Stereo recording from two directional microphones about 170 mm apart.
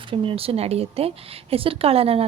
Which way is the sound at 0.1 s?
30° right (ahead or behind).